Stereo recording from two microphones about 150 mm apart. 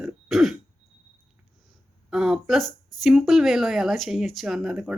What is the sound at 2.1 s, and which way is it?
Speech, 5° right (ahead or behind).